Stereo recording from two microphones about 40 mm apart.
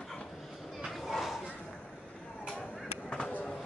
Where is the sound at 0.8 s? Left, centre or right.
Centre.